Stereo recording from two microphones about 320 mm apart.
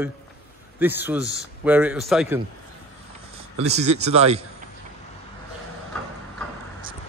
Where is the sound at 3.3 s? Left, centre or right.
Centre.